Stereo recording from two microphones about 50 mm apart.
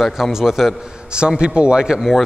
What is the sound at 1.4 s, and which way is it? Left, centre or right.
Speech, right.